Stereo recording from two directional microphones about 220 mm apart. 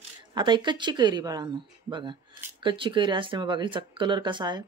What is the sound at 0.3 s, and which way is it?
Speech, 20° right (ahead or behind).